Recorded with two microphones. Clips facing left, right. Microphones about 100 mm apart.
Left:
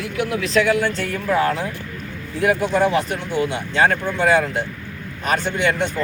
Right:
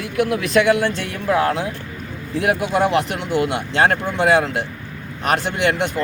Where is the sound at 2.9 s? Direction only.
65° right (ahead or behind).